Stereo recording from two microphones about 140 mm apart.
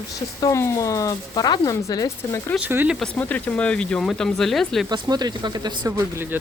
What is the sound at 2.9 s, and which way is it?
Speech, 5° left (ahead or behind).